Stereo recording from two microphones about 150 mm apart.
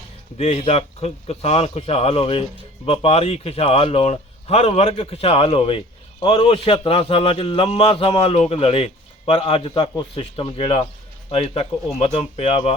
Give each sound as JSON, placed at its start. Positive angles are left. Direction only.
{"t": 0.3, "sound": "a man's voice", "side_deg": 45}